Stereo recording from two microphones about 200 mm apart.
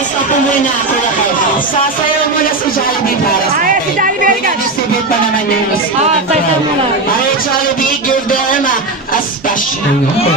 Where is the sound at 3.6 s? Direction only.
40° right (ahead or behind).